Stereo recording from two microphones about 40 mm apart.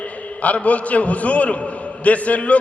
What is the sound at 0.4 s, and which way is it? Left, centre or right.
A man's voice, left.